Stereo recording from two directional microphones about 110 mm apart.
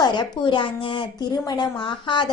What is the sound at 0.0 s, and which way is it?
A woman's voice, 45° left (ahead or behind).